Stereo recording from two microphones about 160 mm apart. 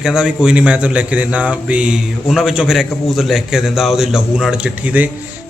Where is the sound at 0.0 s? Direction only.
5° right (ahead or behind).